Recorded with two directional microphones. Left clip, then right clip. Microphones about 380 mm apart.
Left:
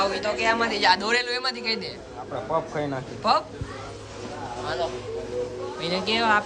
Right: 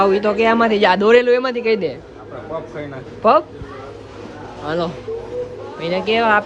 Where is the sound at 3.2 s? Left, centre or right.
Centre.